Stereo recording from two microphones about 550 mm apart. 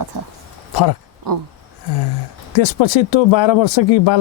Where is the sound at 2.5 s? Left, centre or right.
Left.